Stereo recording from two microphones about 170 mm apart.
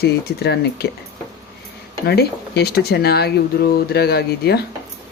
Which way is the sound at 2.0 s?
70° left (ahead or behind).